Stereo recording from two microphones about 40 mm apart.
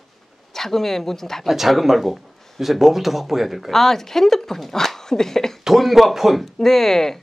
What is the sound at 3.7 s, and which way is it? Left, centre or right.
Speech, centre.